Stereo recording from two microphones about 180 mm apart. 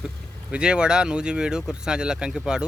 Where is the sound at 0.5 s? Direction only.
5° right (ahead or behind).